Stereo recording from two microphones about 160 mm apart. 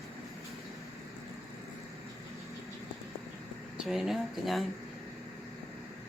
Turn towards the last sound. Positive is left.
turn(degrees=0)  # may be behind; listen again after turning